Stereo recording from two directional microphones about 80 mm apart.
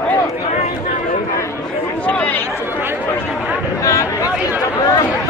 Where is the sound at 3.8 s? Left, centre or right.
Left.